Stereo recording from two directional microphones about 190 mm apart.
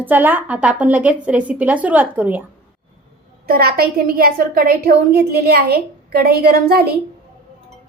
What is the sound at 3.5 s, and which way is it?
A woman's voice, 55° right (ahead or behind).